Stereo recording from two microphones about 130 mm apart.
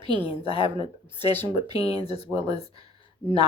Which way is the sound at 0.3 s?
45° left (ahead or behind).